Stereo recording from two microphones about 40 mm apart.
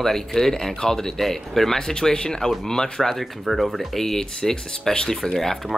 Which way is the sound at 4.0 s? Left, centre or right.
Centre.